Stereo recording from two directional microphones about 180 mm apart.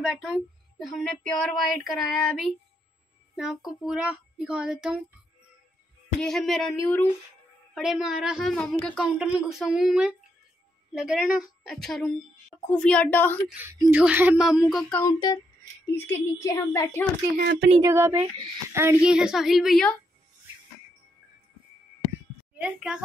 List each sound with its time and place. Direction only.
0.0 s speech: 5° right (ahead or behind)
6.1 s a woman's voice: centre (ahead or behind)
13.5 s speech: 10° right (ahead or behind); by 15.1 s 10° left (ahead or behind)
15.1 s a woman's voice: 20° left (ahead or behind)
17.4 s speech: 65° right (ahead or behind)
17.8 s speech: 15° right (ahead or behind)
22.6 s speech: 5° right (ahead or behind)